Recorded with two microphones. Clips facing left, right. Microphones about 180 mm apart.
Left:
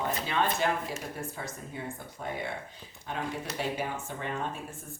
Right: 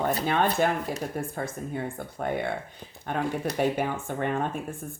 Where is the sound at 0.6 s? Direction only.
50° right (ahead or behind).